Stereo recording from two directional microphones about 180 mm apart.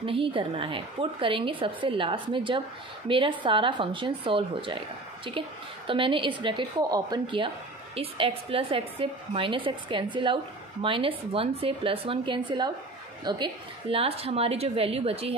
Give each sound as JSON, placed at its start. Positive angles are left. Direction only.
{"t": 0.0, "sound": "a woman's voice", "side_deg": -30}